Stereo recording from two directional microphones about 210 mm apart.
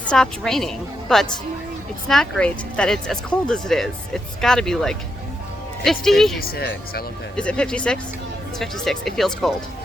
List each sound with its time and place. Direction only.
0.1 s speech: centre (ahead or behind)
6.4 s speech: 45° left (ahead or behind)
7.3 s speech: 5° left (ahead or behind)